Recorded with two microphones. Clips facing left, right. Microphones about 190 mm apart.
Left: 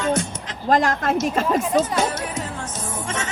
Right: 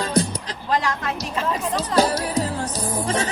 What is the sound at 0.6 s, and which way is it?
Speech, 45° left (ahead or behind).